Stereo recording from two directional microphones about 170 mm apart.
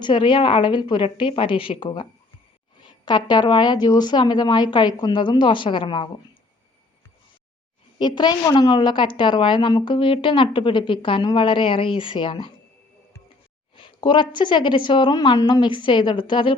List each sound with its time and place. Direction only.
0.0 s a woman's voice: 30° left (ahead or behind)
7.9 s a woman's voice: 25° left (ahead or behind)
13.7 s a woman's voice: 30° left (ahead or behind)